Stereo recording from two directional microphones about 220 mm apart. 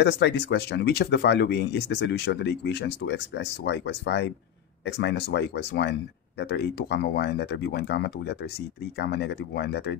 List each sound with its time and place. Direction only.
0.0 s speech: 50° left (ahead or behind)